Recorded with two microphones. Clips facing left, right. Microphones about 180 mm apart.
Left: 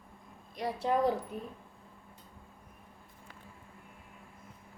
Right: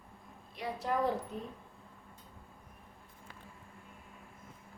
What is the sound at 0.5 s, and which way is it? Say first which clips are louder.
Speech: left 4 dB; 35° left (ahead or behind).